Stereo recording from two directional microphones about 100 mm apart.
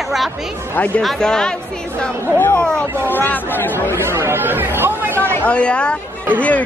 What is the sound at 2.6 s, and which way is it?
Speech, 10° left (ahead or behind).